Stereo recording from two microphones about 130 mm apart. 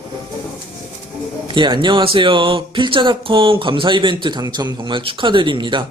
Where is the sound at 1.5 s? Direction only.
35° right (ahead or behind).